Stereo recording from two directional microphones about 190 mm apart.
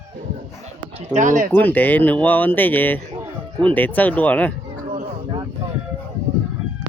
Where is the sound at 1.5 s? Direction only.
10° left (ahead or behind).